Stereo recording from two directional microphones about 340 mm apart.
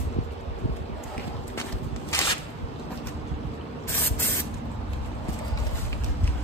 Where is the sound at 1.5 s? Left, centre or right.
Centre.